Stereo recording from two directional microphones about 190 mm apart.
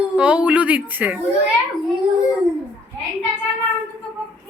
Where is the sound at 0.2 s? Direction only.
5° right (ahead or behind).